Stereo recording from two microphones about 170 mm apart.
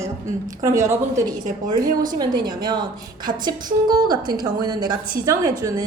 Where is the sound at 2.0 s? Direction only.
25° right (ahead or behind).